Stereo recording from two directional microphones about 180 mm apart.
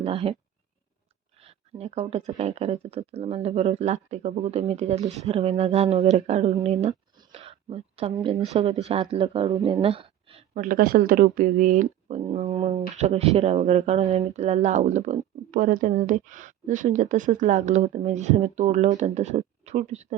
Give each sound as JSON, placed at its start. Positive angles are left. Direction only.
{"t": 0.0, "sound": "speech", "side_deg": -30}
{"t": 1.4, "sound": "speech", "side_deg": -35}
{"t": 9.8, "sound": "a sound", "side_deg": -30}
{"t": 10.6, "sound": "speech", "side_deg": -50}